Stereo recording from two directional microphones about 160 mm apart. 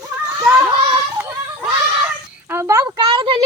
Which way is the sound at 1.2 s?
5° right (ahead or behind).